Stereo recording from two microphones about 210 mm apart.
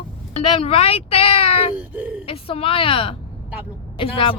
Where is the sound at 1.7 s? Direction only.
5° right (ahead or behind).